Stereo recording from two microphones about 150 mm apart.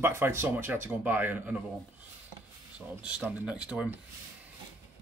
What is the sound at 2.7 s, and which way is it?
Speech, 10° right (ahead or behind).